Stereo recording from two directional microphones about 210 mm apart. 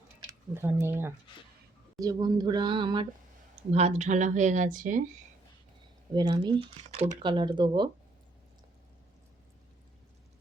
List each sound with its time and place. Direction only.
0.3 s speech: 10° right (ahead or behind); by 5.0 s 40° right (ahead or behind)
6.1 s speech: 20° right (ahead or behind)